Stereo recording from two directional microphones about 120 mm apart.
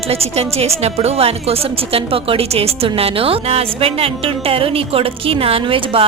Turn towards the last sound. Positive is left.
turn(degrees=-50)  # may be behind; listen again after turning